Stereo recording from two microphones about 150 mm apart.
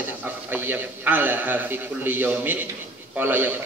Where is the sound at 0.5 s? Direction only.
15° right (ahead or behind).